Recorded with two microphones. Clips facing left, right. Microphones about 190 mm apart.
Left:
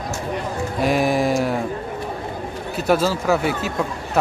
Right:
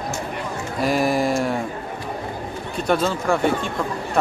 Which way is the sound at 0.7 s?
Centre (ahead or behind).